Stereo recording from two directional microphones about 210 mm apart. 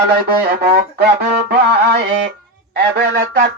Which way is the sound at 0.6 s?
50° right (ahead or behind).